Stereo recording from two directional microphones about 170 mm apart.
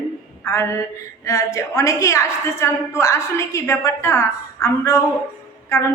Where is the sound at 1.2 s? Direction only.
20° left (ahead or behind).